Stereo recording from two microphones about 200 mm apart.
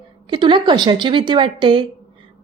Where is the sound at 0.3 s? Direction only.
25° right (ahead or behind).